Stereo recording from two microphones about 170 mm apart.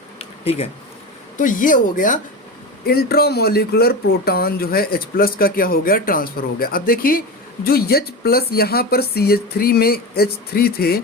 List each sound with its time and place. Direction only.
0.2 s bee: 35° left (ahead or behind)
1.4 s speech: 50° left (ahead or behind)
2.8 s speech: 65° left (ahead or behind)